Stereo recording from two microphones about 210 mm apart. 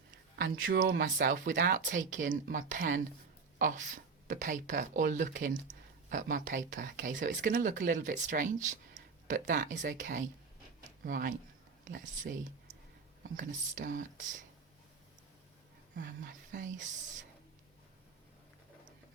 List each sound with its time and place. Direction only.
0.4 s speech: 65° right (ahead or behind)
0.9 s speech: 40° right (ahead or behind)
16.0 s speech: 40° right (ahead or behind)